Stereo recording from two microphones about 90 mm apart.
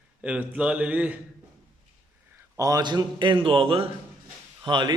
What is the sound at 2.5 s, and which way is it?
A man's voice, 45° right (ahead or behind).